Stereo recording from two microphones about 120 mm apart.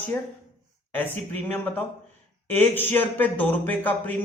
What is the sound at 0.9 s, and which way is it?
Speech, 15° left (ahead or behind).